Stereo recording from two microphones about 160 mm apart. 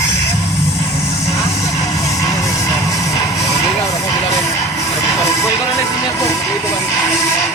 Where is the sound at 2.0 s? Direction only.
20° left (ahead or behind).